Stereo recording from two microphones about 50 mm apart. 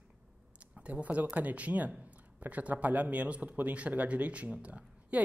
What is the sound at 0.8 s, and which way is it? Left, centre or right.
Speech, right.